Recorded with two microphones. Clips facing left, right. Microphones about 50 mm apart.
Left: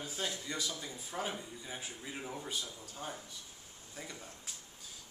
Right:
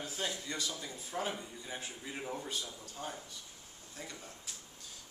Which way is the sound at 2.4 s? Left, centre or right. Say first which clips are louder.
Even; centre.